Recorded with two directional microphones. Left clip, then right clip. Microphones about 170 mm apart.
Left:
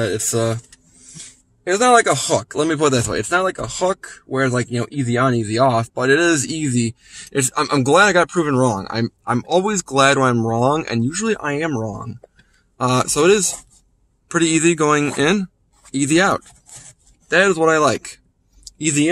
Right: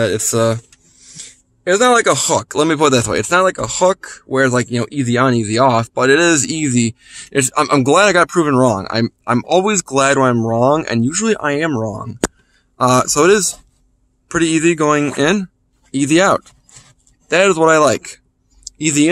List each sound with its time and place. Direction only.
0.0 s speech: 40° right (ahead or behind)